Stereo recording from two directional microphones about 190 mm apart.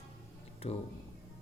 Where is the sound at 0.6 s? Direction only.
30° left (ahead or behind).